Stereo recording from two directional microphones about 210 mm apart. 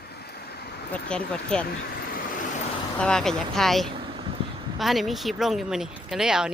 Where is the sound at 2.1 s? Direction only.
40° left (ahead or behind).